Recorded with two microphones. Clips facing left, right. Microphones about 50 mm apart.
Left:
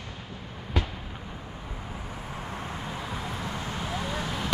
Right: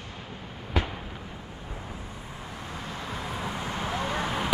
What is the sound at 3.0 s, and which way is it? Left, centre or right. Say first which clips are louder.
Vehicle: even; centre.